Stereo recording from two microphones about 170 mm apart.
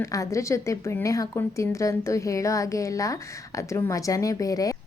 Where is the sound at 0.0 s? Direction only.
20° left (ahead or behind).